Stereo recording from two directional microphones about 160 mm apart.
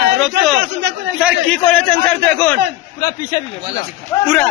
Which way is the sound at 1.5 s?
5° left (ahead or behind).